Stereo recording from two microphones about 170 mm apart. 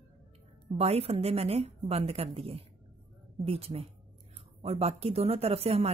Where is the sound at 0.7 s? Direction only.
35° right (ahead or behind).